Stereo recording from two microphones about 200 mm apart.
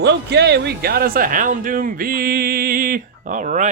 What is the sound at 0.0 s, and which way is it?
Speech, 60° right (ahead or behind).